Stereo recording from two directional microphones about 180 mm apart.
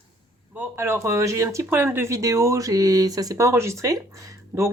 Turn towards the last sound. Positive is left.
turn(degrees=-10)  # may be behind; listen again after turning